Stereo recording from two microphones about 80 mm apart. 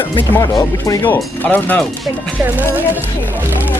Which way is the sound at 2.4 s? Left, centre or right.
Right.